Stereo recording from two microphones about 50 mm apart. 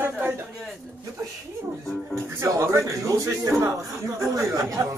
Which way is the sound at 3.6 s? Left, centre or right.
Right.